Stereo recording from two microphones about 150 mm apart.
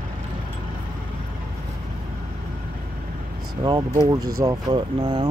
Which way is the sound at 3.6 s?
30° right (ahead or behind).